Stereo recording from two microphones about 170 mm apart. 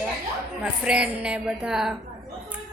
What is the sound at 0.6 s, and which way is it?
A woman's voice, 5° right (ahead or behind).